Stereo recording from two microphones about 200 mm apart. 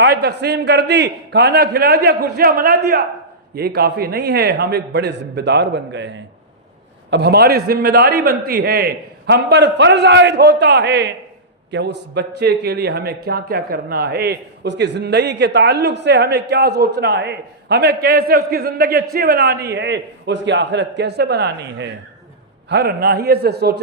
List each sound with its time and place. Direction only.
0.0 s a man's voice: 55° right (ahead or behind)